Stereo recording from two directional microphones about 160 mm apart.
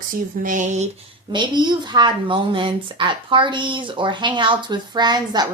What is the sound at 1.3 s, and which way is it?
A woman's voice, 30° right (ahead or behind).